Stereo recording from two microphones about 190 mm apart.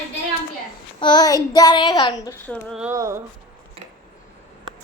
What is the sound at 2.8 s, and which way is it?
Speech, 15° right (ahead or behind).